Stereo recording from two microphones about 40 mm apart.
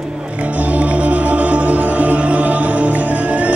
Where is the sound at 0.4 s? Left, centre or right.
Right.